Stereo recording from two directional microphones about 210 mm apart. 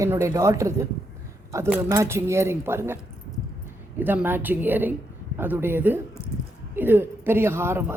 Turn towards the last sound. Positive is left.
turn(degrees=-10)  # may be behind; listen again after turning